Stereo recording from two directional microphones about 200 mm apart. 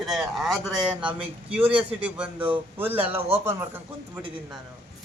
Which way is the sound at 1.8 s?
5° right (ahead or behind).